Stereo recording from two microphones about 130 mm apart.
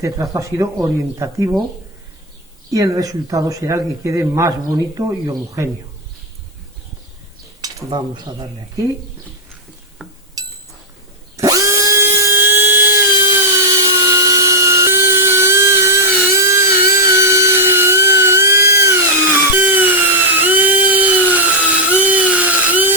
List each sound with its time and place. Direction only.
0.0 s speech: 25° right (ahead or behind)
2.6 s speech: 25° right (ahead or behind)
7.9 s speech: 35° right (ahead or behind)
10.0 s a sound: 5° right (ahead or behind)
10.4 s a sound: 30° right (ahead or behind)
11.3 s drill: 25° right (ahead or behind)